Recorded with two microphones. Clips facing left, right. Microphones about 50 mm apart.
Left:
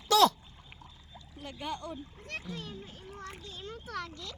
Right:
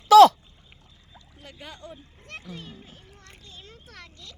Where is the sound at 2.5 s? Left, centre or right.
Centre.